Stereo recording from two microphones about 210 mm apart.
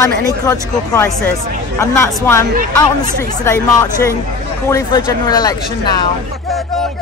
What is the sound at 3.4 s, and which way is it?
Speech, 15° left (ahead or behind).